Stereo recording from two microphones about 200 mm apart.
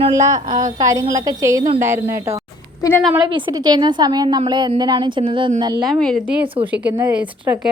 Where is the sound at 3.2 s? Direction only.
25° right (ahead or behind).